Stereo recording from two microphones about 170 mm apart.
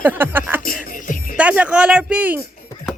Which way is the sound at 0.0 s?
10° right (ahead or behind).